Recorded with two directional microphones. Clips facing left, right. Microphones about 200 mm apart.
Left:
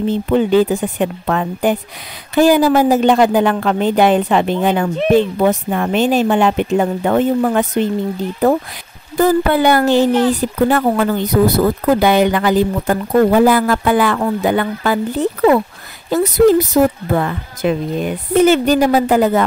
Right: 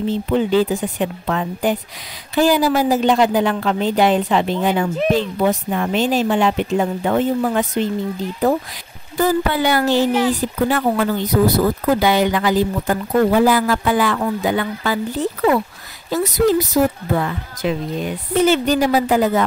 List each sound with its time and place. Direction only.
0.0 s speech: 55° left (ahead or behind)